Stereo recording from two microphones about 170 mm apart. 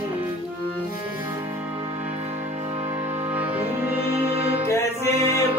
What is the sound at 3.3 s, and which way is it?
Music, 10° right (ahead or behind).